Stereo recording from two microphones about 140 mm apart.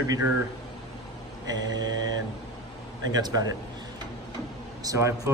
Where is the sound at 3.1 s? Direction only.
30° right (ahead or behind).